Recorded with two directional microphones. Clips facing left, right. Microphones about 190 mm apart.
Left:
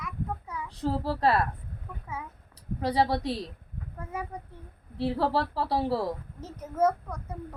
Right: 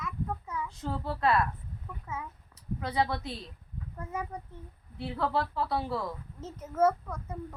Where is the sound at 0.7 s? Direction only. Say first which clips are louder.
Left 10 dB; 35° left (ahead or behind).